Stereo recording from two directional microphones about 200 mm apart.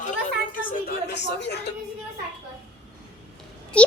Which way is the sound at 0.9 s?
55° left (ahead or behind).